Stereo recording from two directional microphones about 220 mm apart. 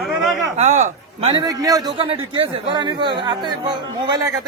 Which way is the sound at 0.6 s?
30° right (ahead or behind).